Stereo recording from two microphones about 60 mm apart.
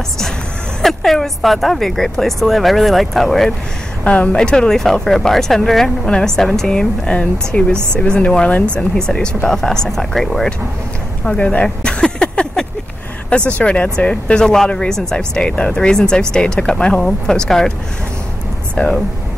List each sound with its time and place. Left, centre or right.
0.8 s speech: centre
4.0 s speech: left; by 10.5 s centre
11.2 s speech: left
18.8 s speech: left